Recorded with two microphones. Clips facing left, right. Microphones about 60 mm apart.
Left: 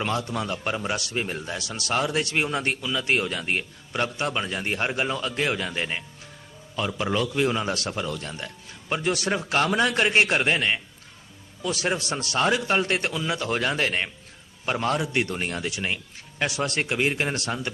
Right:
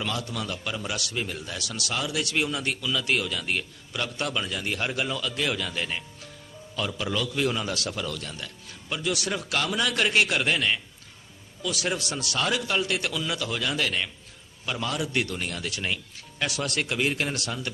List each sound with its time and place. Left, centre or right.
0.0 s speech: left
1.9 s a man's voice: left
13.5 s a man's voice: left
15.0 s a man's voice: left
15.7 s a man's voice: centre